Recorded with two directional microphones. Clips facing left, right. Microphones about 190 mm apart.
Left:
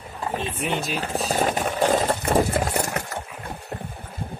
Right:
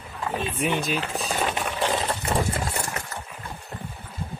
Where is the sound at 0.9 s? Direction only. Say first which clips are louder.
Left 3 dB; 40° left (ahead or behind).